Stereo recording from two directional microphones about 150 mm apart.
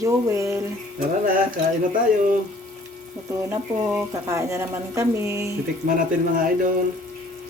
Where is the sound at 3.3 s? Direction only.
20° right (ahead or behind).